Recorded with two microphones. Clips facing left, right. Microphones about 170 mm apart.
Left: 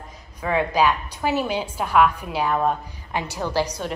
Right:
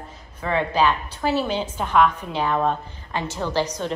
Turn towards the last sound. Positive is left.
turn(degrees=10)  # may be behind; listen again after turning